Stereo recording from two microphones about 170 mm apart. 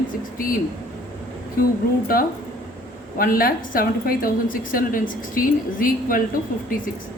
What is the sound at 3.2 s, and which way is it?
A woman's voice, 60° left (ahead or behind).